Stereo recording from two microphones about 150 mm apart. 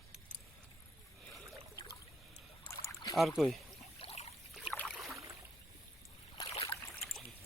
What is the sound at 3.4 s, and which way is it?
Speech, centre (ahead or behind).